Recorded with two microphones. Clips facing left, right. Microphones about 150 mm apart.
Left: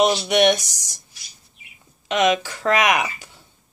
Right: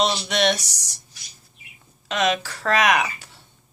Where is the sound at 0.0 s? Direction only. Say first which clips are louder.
Left 5 dB; 15° left (ahead or behind).